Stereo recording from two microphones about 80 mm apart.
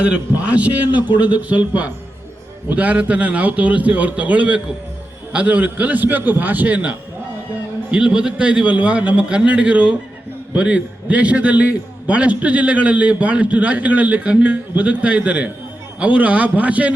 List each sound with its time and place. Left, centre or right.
0.0 s a man's voice: centre